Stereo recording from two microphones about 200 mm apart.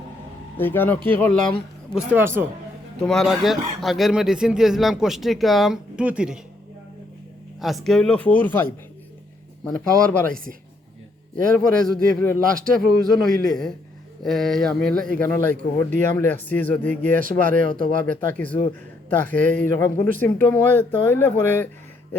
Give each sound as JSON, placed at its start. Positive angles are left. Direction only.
{"t": 0.5, "sound": "speech", "side_deg": 10}
{"t": 2.0, "sound": "speech", "side_deg": -10}
{"t": 3.0, "sound": "speech", "side_deg": 0}
{"t": 7.6, "sound": "speech", "side_deg": 0}
{"t": 9.6, "sound": "speech", "side_deg": 10}
{"t": 15.5, "sound": "speech", "side_deg": -40}
{"t": 16.1, "sound": "speech", "side_deg": 10}
{"t": 16.9, "sound": "speech", "side_deg": -40}
{"t": 18.0, "sound": "speech", "side_deg": 10}